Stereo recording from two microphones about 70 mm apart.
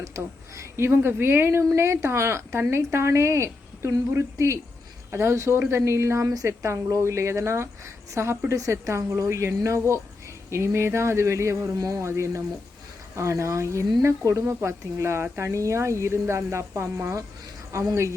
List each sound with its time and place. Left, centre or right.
0.0 s a woman's voice: right
6.2 s a woman's voice: right